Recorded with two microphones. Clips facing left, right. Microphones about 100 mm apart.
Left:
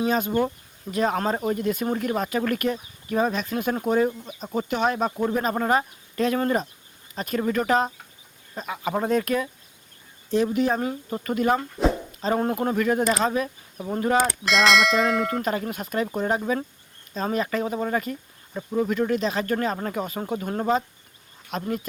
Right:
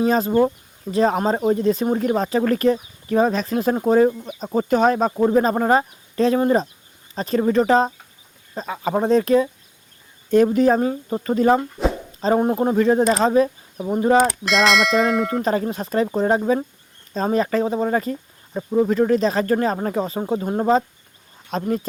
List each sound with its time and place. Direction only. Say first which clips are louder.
0.0 s speech: right 6 dB; 35° right (ahead or behind)
10.3 s speech: right 7 dB; 40° right (ahead or behind)
10.8 s speech: right 6 dB; 25° right (ahead or behind)
12.4 s speech: right 5 dB; 20° right (ahead or behind)
13.7 s speech: right 5 dB; 15° right (ahead or behind)
14.2 s speech: right 4 dB; centre (ahead or behind)
15.3 s speech: right 5 dB; 30° right (ahead or behind)